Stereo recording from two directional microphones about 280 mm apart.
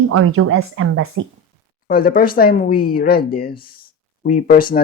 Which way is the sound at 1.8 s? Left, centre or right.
Left.